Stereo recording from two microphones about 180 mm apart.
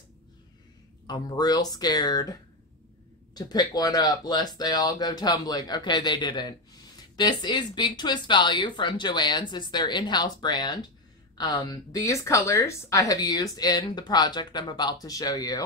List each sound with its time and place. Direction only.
1.0 s speech: 20° left (ahead or behind)
3.3 s speech: 20° left (ahead or behind)